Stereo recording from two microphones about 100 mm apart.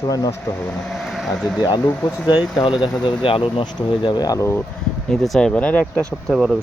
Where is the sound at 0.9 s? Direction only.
Centre (ahead or behind).